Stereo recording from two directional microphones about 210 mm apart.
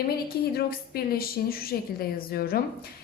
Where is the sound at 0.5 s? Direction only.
45° left (ahead or behind).